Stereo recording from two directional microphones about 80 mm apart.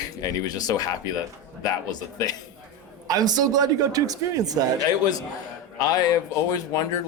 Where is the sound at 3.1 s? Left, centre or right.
Right.